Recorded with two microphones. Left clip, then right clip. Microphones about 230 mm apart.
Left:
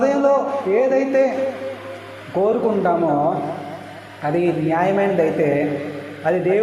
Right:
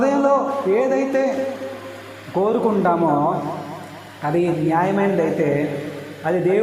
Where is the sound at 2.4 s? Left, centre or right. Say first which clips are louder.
Left 1 dB; right.